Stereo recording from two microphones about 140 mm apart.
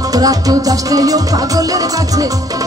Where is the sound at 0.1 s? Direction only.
25° right (ahead or behind).